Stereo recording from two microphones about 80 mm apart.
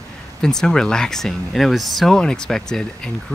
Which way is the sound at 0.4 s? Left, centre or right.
Centre.